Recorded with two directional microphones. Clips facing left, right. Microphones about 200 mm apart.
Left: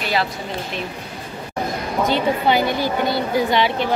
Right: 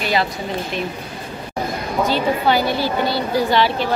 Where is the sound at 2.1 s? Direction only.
20° left (ahead or behind).